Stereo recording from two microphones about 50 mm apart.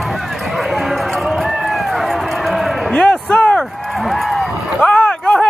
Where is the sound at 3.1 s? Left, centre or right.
Left.